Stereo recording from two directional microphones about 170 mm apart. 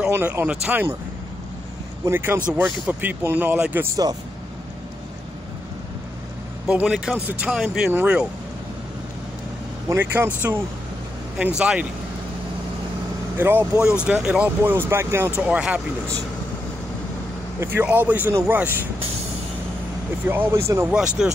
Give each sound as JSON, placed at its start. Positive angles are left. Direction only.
{"t": 0.1, "sound": "speech", "side_deg": -10}
{"t": 2.0, "sound": "speech", "side_deg": -15}
{"t": 3.9, "sound": "speech", "side_deg": -20}
{"t": 6.7, "sound": "speech", "side_deg": -5}
{"t": 9.8, "sound": "speech", "side_deg": -10}
{"t": 13.4, "sound": "speech", "side_deg": -10}
{"t": 17.6, "sound": "speech", "side_deg": -10}
{"t": 20.2, "sound": "speech", "side_deg": -15}
{"t": 20.9, "sound": "speech", "side_deg": -5}